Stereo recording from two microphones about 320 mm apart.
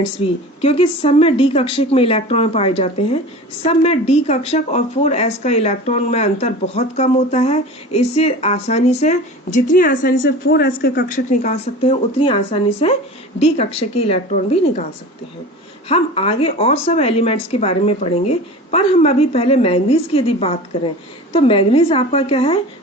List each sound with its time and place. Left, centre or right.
0.2 s speech: centre
15.9 s speech: centre